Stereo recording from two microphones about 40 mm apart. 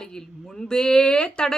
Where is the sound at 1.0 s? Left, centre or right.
Left.